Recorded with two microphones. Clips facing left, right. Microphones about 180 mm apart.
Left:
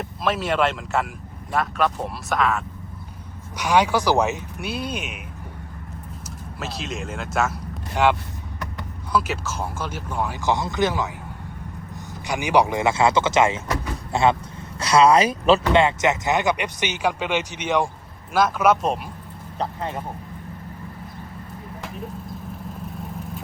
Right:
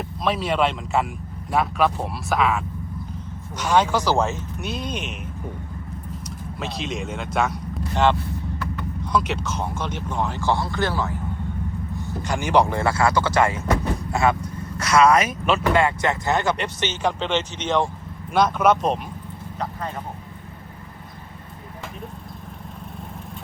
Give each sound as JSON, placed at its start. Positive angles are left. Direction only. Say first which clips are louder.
{"t": 0.3, "sound": "speech", "louder": "even", "side_deg": 0}
{"t": 3.6, "sound": "speech", "louder": "even", "side_deg": 10}
{"t": 6.6, "sound": "speech", "louder": "right 2 dB", "side_deg": 5}
{"t": 9.1, "sound": "speech", "louder": "even", "side_deg": 5}
{"t": 12.3, "sound": "speech", "louder": "even", "side_deg": 15}